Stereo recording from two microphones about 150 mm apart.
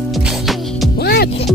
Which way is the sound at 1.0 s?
90° left.